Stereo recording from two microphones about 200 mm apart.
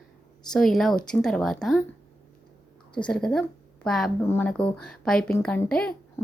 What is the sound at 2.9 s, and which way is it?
A woman's voice, 5° left (ahead or behind).